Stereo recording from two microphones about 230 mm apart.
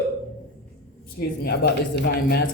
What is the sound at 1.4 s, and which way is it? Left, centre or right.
A man's voice, left.